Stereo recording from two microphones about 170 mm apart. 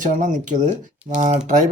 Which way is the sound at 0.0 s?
50° right (ahead or behind).